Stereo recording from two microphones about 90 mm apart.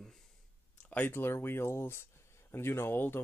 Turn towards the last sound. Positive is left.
turn(degrees=25)  # may be behind; listen again after turning